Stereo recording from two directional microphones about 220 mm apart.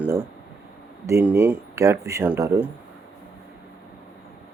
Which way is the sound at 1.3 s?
10° right (ahead or behind).